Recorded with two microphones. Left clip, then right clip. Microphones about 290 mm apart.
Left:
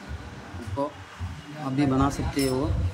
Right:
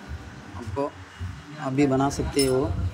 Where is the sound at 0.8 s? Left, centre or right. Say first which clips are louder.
Right 1 dB; centre.